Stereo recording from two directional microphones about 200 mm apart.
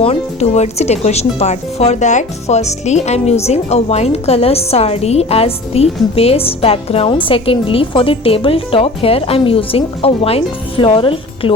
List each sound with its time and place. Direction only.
0.0 s a woman's voice: 30° left (ahead or behind)